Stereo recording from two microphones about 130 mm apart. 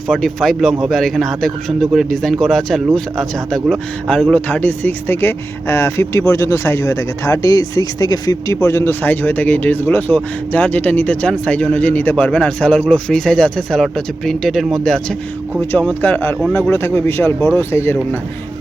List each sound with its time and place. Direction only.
0.1 s a man's voice: 5° left (ahead or behind)
16.0 s speech: 15° left (ahead or behind)